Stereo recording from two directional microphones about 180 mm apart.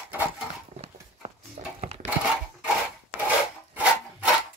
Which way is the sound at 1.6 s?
35° right (ahead or behind).